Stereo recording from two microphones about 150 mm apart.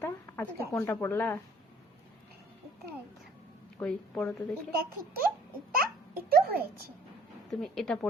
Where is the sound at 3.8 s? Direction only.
5° left (ahead or behind).